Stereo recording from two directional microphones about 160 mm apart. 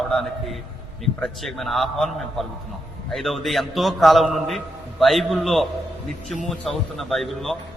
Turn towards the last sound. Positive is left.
turn(degrees=0)  # may be behind; listen again after turning